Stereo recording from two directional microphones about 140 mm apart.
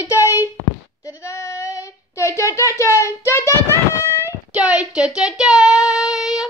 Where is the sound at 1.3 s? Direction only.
25° left (ahead or behind).